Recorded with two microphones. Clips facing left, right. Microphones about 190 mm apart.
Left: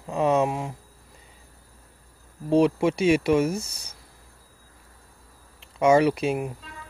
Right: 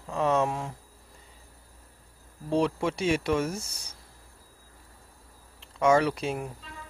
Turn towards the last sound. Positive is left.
turn(degrees=15)  # may be behind; listen again after turning